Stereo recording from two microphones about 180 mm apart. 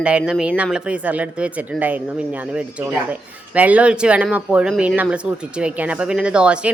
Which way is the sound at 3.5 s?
10° right (ahead or behind).